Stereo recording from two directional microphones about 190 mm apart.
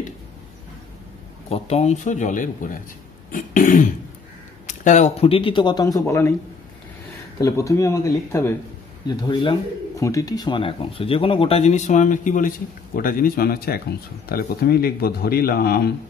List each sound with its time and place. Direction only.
1.5 s speech: 35° left (ahead or behind)
3.3 s throat clearing: 45° left (ahead or behind)
4.6 s speech: 40° left (ahead or behind); by 6.3 s 15° left (ahead or behind)
7.3 s speech: 15° left (ahead or behind)
9.0 s speech: 25° left (ahead or behind); by 15.9 s 55° left (ahead or behind)